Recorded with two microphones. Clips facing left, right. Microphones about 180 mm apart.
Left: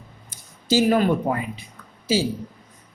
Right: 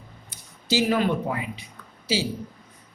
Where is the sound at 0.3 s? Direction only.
45° left (ahead or behind).